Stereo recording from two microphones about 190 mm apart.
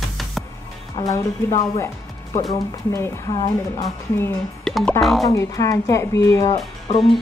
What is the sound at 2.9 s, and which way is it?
A woman's voice, 20° left (ahead or behind).